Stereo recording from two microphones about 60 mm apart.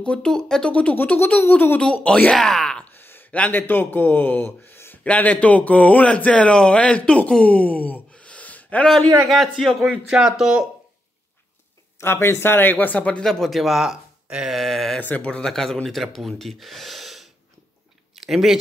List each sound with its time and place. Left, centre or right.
0.0 s speech: centre
1.5 s speech: left
2.0 s speech: centre
2.3 s speech: centre
3.0 s a sound: left
3.3 s speech: left
3.5 s speech: left
5.0 s speech: left
9.3 s speech: centre
12.0 s speech: left
13.2 s speech: centre
14.6 s a sound: centre
15.0 s speech: left
15.2 s speech: centre